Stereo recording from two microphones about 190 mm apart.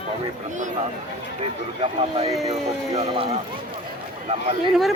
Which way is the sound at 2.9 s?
25° right (ahead or behind).